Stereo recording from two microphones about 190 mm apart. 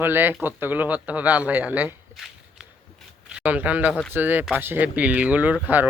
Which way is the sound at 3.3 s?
5° right (ahead or behind).